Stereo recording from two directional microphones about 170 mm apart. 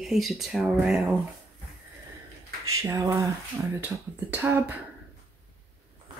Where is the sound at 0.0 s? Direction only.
Centre (ahead or behind).